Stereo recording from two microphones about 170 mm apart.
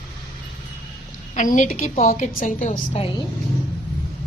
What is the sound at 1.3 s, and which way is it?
A woman's voice, 50° left (ahead or behind).